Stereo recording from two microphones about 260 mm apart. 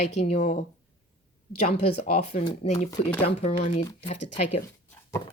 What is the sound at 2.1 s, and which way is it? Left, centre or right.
Speech, left.